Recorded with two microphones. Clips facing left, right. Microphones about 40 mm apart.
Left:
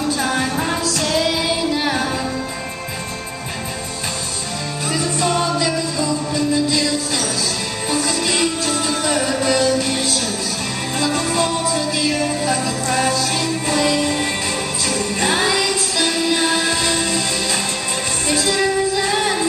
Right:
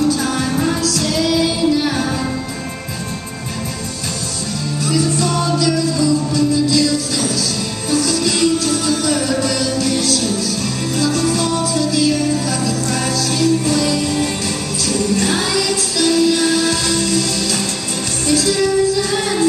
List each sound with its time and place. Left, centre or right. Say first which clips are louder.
0.1 s music: right 1 dB; left
4.8 s music: right 2 dB; left